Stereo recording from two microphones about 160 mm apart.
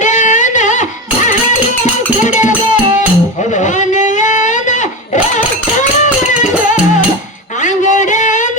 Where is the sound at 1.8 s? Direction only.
50° left (ahead or behind).